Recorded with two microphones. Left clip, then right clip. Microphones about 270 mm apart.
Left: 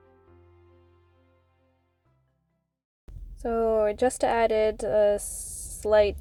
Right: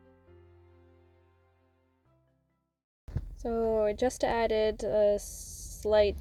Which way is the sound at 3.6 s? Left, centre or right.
Left.